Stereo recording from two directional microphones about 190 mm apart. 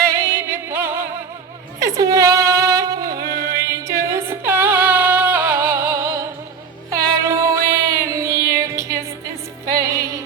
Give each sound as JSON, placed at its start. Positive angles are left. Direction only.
{"t": 0.2, "sound": "music", "side_deg": -15}
{"t": 2.0, "sound": "a sound", "side_deg": -20}
{"t": 3.2, "sound": "music", "side_deg": -15}